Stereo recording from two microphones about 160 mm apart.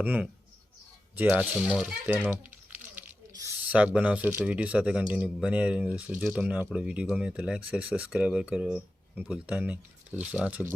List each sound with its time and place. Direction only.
0.0 s speech: 10° right (ahead or behind)
2.9 s a sound: 20° right (ahead or behind)
3.7 s speech: 10° right (ahead or behind)